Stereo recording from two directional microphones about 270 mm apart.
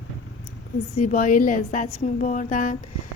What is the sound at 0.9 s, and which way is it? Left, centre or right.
Speech, left.